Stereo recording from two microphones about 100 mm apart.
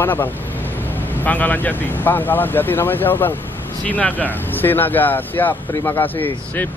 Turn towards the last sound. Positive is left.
turn(degrees=20)  # may be behind; listen again after turning